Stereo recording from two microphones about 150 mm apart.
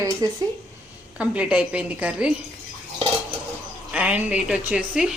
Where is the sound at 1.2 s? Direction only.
5° right (ahead or behind).